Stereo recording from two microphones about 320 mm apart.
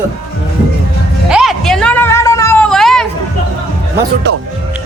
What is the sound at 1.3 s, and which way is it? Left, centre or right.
Cat, centre.